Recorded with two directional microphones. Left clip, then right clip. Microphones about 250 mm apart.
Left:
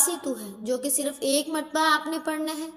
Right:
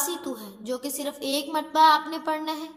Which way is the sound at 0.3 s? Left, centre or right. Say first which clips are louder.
Left 3 dB; centre.